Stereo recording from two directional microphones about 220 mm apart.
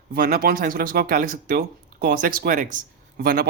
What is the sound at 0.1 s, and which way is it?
Speech, 45° right (ahead or behind).